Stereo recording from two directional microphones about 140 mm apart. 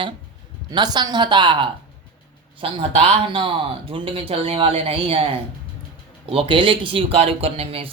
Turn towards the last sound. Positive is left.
turn(degrees=-45)  # may be behind; listen again after turning